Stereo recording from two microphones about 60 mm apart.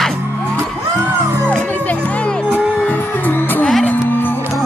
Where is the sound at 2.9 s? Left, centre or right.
Left.